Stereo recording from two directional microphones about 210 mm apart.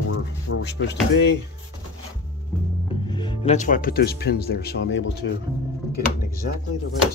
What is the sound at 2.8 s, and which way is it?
Speech, 25° left (ahead or behind).